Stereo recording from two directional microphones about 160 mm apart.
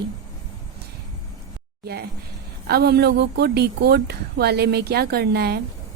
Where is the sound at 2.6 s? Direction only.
85° right.